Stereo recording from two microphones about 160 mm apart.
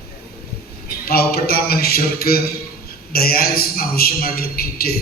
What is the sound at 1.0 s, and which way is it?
A man's voice, 75° left (ahead or behind).